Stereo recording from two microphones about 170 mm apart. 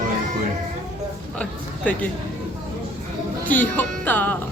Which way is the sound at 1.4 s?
10° left (ahead or behind).